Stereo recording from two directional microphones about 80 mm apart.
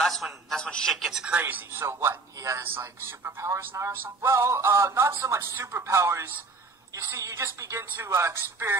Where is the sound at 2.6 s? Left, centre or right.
Right.